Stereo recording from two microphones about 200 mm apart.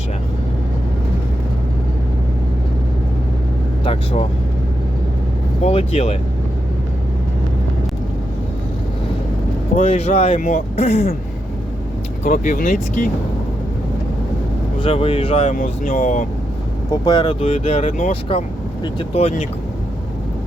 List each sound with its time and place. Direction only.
3.8 s speech: 30° left (ahead or behind)
5.6 s speech: 35° left (ahead or behind)
9.7 s speech: 35° left (ahead or behind)
12.2 s speech: 45° left (ahead or behind)
14.8 s speech: 30° left (ahead or behind)
15.5 s speech: 45° left (ahead or behind)
16.9 s speech: 20° left (ahead or behind)
17.6 s speech: 35° left (ahead or behind)